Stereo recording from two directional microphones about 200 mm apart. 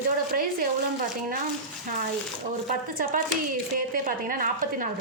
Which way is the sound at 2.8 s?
45° right (ahead or behind).